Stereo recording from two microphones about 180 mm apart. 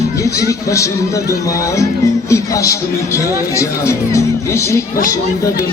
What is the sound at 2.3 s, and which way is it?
Speech, 15° left (ahead or behind).